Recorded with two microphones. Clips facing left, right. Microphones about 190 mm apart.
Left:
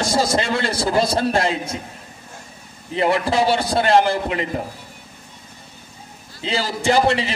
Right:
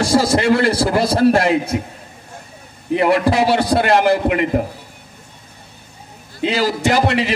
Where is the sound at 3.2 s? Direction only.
25° left (ahead or behind).